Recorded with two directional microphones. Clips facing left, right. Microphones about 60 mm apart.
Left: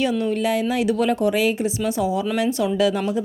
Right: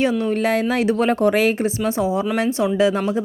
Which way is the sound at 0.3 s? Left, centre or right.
Right.